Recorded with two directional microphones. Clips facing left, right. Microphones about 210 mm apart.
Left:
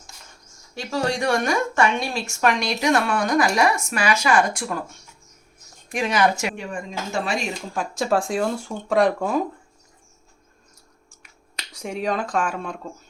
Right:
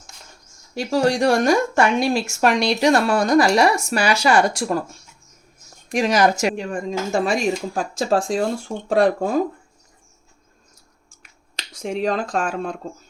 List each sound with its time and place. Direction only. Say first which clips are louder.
0.7 s speech: right 6 dB; 40° right (ahead or behind)
11.9 s speech: right 3 dB; 30° right (ahead or behind)